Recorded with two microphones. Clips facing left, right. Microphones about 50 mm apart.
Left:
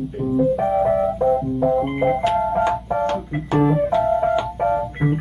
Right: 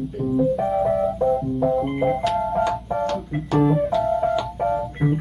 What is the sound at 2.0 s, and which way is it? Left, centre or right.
Ice cream truck, left.